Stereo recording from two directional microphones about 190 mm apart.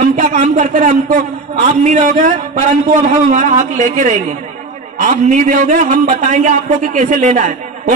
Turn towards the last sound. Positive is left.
turn(degrees=-40)  # may be behind; listen again after turning